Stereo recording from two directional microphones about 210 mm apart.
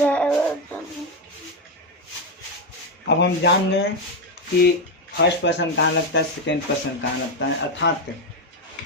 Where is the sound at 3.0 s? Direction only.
55° left (ahead or behind).